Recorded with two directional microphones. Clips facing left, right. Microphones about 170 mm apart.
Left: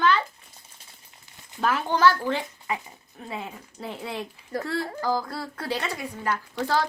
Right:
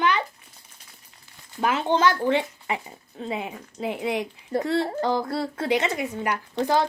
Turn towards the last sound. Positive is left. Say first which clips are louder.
# right 3 dB
turn(degrees=-20)  # may be behind; listen again after turning